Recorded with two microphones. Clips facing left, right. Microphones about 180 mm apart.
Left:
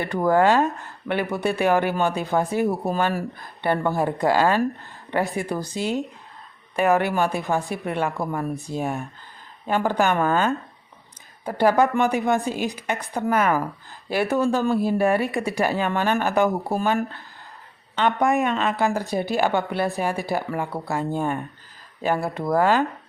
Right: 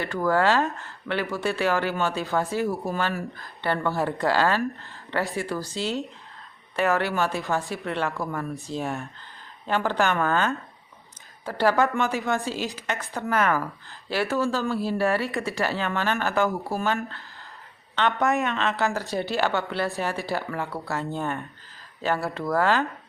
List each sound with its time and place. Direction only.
0.0 s speech: 20° left (ahead or behind)